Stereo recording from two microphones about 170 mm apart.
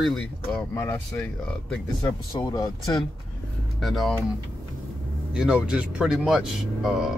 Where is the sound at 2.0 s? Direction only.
25° left (ahead or behind).